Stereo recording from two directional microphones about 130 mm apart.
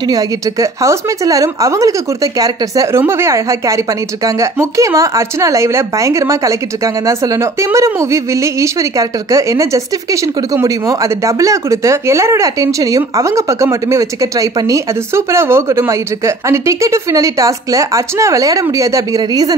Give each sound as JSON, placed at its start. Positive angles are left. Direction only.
{"t": 0.1, "sound": "speech", "side_deg": -25}